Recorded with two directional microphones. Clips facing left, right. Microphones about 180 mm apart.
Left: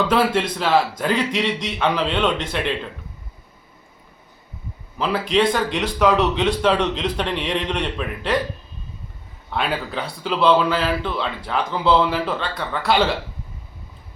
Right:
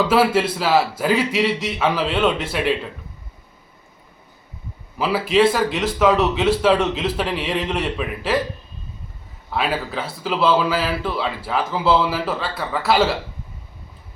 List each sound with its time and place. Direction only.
0.1 s speech: 5° right (ahead or behind)
4.9 s speech: 5° right (ahead or behind)
9.5 s speech: centre (ahead or behind)